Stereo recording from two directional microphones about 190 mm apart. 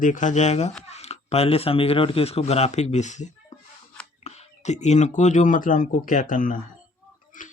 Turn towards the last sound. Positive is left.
turn(degrees=45)  # may be behind; listen again after turning